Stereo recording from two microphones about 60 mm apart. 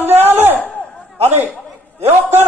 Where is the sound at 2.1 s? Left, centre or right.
Right.